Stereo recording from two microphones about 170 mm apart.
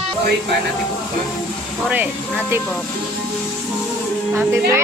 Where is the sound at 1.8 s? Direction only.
10° right (ahead or behind).